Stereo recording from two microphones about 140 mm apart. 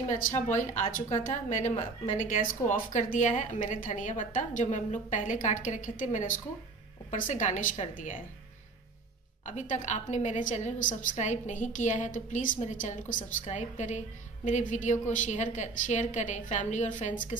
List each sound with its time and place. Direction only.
0.6 s a woman's voice: 60° left (ahead or behind)
9.5 s a woman's voice: 60° left (ahead or behind)